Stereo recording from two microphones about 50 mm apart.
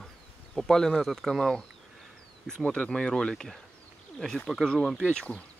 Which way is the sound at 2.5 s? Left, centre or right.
Left.